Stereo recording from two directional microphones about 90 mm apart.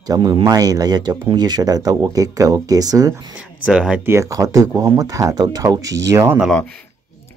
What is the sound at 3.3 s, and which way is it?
Speech, 10° right (ahead or behind).